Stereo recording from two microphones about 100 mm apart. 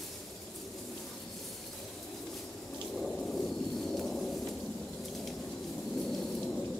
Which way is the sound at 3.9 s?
5° left (ahead or behind).